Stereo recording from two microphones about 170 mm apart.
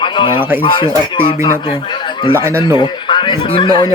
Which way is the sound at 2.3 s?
15° right (ahead or behind).